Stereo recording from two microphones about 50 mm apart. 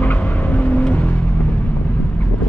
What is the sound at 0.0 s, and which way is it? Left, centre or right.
Vehicle, left.